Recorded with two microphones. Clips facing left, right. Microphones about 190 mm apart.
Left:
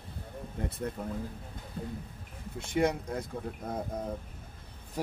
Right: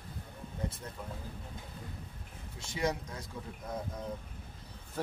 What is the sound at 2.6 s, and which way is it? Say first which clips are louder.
Speech: left 6 dB; 55° left (ahead or behind).